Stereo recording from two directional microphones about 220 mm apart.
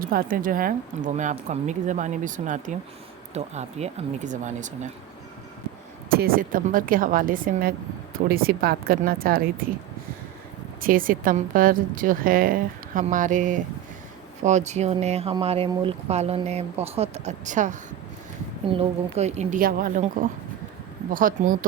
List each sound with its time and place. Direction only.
0.0 s a woman's voice: 40° right (ahead or behind)
6.1 s a woman's voice: 45° right (ahead or behind)
10.8 s a woman's voice: 40° right (ahead or behind)
21.1 s a woman's voice: 40° right (ahead or behind)